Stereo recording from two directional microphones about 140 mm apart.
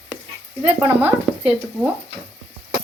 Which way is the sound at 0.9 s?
10° right (ahead or behind).